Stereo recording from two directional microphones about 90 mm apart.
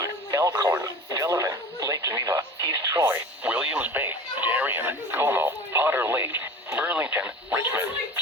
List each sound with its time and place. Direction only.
0.0 s radio: 40° right (ahead or behind)
3.1 s radio: 20° right (ahead or behind)